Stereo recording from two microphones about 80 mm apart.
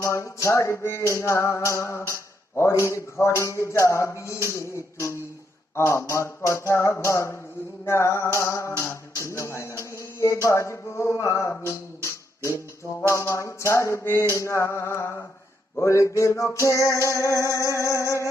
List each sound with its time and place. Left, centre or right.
0.0 s music: left